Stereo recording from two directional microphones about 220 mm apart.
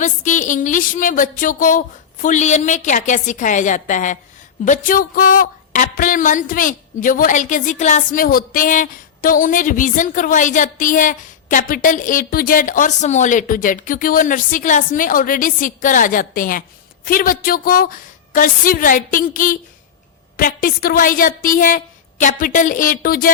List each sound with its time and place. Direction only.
0.0 s speech: 35° left (ahead or behind)